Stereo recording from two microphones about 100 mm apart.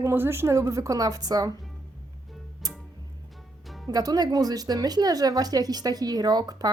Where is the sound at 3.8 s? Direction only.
40° right (ahead or behind).